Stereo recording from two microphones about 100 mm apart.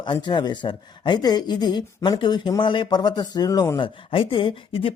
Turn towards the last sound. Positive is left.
turn(degrees=60)  # may be behind; listen again after turning